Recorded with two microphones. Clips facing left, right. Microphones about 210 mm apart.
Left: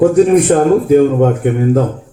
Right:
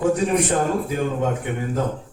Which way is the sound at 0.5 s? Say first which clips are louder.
Left 13 dB; 60° left (ahead or behind).